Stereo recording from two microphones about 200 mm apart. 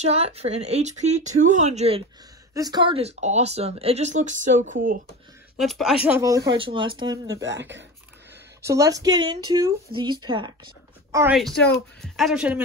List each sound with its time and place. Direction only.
0.0 s speech: 30° right (ahead or behind)
2.5 s speech: 20° right (ahead or behind); by 4.7 s 40° right (ahead or behind)
5.6 s a man's voice: centre (ahead or behind)
6.0 s speech: 15° right (ahead or behind)
7.4 s speech: 65° right (ahead or behind)
8.6 s a woman's voice: 15° right (ahead or behind)
11.3 s a man's voice: centre (ahead or behind)